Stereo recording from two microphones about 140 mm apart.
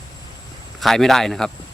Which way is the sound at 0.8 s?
Centre (ahead or behind).